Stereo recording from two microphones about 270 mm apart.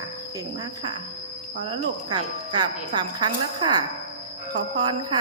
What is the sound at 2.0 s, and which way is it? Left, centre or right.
Speech, centre.